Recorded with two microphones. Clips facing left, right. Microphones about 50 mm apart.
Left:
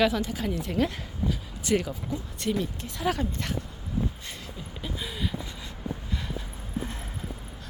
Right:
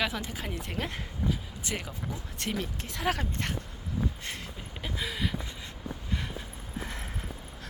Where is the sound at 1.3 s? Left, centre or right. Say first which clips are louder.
Left 10 dB; centre.